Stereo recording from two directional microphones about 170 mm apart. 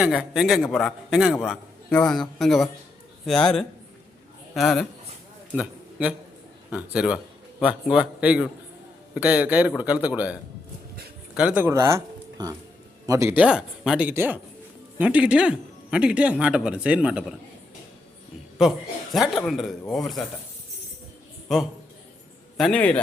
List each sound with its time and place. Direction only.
0.0 s speech: centre (ahead or behind)
5.5 s a sound: 5° right (ahead or behind)
6.7 s speech: 5° right (ahead or behind)
18.6 s speech: centre (ahead or behind)
22.5 s a man's voice: 5° left (ahead or behind)